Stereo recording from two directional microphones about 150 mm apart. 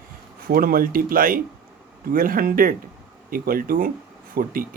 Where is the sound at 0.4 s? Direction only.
75° right (ahead or behind).